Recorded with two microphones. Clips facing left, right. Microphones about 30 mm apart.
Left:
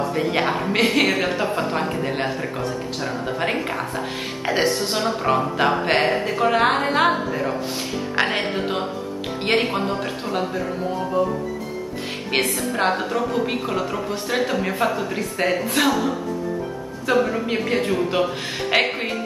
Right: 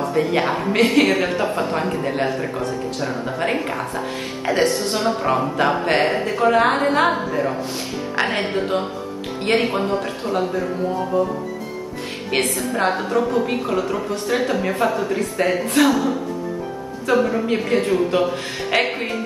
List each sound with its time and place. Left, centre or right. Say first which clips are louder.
0.1 s a woman's voice: right 2 dB; centre
12.3 s a woman's voice: right 1 dB; centre
12.7 s a woman's voice: right 2 dB; centre
18.9 s speech: right 1 dB; centre